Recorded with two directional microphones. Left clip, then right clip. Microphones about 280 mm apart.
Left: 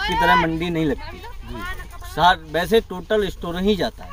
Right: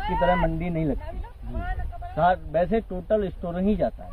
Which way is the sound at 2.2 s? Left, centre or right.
Centre.